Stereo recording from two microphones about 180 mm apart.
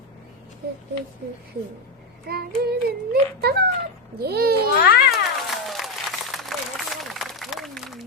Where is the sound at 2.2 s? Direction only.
60° right (ahead or behind).